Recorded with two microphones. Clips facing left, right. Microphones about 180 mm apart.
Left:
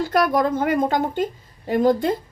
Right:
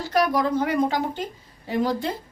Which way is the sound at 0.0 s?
50° left (ahead or behind).